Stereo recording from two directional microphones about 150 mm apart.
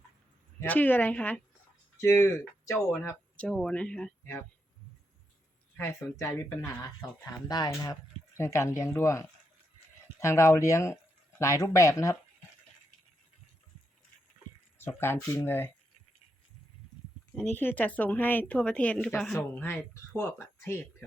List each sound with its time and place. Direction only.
0.6 s speech: 10° left (ahead or behind)
4.2 s speech: 15° left (ahead or behind)
5.7 s speech: 20° left (ahead or behind)
14.8 s speech: 15° left (ahead or behind)
17.3 s speech: 15° left (ahead or behind)
19.5 s speech: 15° left (ahead or behind)